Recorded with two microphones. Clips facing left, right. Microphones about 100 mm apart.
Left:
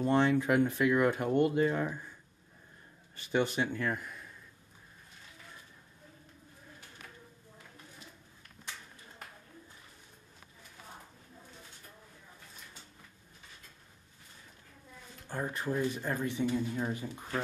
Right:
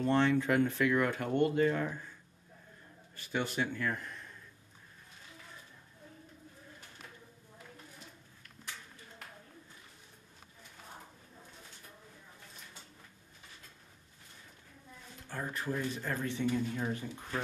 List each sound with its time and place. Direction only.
0.0 s speech: 15° left (ahead or behind)
3.3 s speech: 20° left (ahead or behind)
15.2 s speech: 20° left (ahead or behind)